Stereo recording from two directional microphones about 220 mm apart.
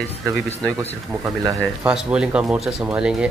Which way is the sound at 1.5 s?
5° right (ahead or behind).